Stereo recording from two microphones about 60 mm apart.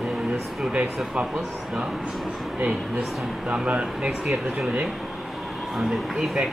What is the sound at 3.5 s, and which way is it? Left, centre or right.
Speech, centre.